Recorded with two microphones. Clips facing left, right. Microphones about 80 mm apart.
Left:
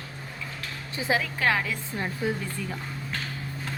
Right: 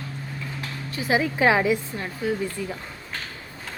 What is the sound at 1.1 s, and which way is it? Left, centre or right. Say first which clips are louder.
Speech: right 6 dB; centre.